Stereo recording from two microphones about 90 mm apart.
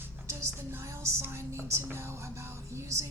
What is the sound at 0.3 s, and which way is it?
Speech, 30° right (ahead or behind).